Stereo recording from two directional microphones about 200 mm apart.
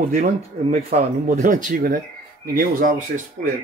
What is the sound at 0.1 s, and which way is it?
Speech, 45° right (ahead or behind).